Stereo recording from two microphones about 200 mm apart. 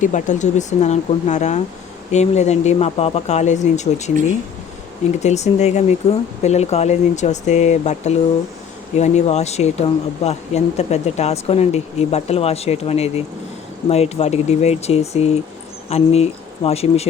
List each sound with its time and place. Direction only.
0.0 s speech: 40° left (ahead or behind)
5.2 s speech: 35° left (ahead or behind)